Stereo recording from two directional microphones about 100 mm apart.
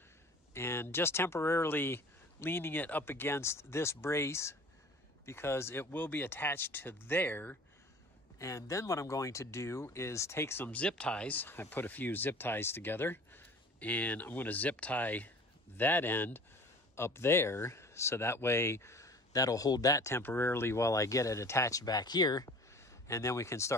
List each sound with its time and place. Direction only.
0.6 s speech: 25° left (ahead or behind)
8.4 s speech: 30° left (ahead or behind)
23.0 s speech: 30° left (ahead or behind)